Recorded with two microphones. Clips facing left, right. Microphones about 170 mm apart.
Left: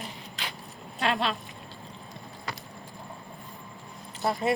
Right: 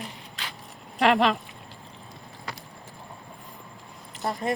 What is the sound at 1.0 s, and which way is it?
Speech, 90° right.